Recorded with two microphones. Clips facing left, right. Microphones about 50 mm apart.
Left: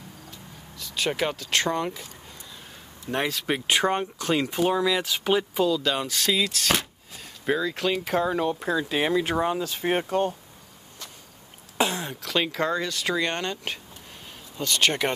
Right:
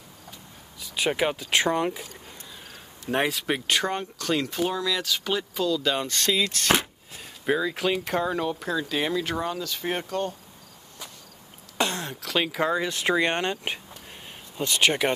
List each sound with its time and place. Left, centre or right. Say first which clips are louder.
0.7 s speech: right 1 dB; centre
3.1 s speech: right 1 dB; centre
3.6 s speech: left 6 dB; centre
5.8 s speech: even; centre; by 10.3 s left
11.8 s speech: left 2 dB; centre
12.8 s speech: right 3 dB; right